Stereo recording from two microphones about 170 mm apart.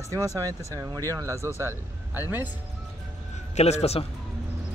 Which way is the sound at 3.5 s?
40° left (ahead or behind).